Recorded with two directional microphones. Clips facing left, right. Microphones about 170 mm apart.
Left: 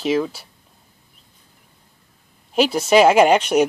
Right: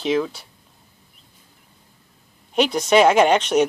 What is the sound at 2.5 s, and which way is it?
Speech, 5° left (ahead or behind).